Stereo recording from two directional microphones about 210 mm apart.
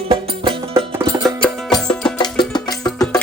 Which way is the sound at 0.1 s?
25° right (ahead or behind).